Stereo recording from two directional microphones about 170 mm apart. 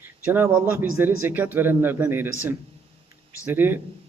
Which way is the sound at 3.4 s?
10° right (ahead or behind).